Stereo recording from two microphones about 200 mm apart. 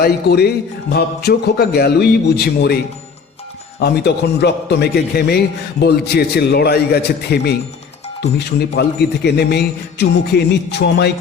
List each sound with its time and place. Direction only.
0.0 s a man's voice: 55° left (ahead or behind)
3.8 s a man's voice: 55° left (ahead or behind)